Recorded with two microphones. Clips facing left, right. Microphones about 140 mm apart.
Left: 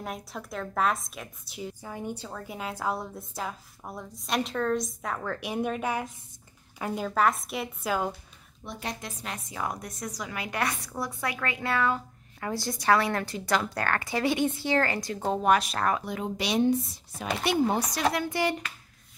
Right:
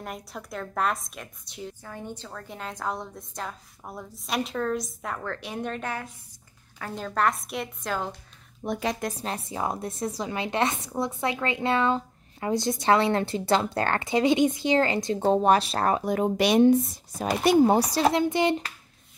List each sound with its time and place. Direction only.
0.0 s a woman's voice: centre (ahead or behind)
7.1 s a woman's voice: centre (ahead or behind)
8.6 s a woman's voice: 40° right (ahead or behind)
16.0 s speech: 45° right (ahead or behind)
17.2 s speech: 40° right (ahead or behind)
17.9 s a woman's voice: 25° right (ahead or behind)